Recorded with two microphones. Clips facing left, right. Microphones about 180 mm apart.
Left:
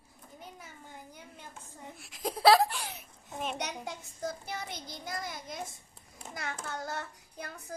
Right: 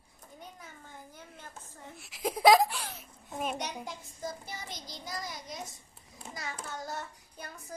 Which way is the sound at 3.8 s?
60° left (ahead or behind).